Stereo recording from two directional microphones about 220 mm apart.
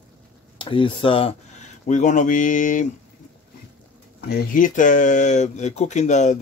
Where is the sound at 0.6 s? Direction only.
20° left (ahead or behind).